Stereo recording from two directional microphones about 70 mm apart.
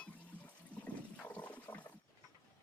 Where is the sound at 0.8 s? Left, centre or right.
Left.